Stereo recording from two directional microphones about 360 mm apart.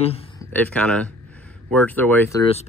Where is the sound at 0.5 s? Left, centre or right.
Centre.